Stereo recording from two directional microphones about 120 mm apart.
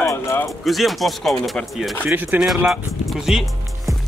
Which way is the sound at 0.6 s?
Centre (ahead or behind).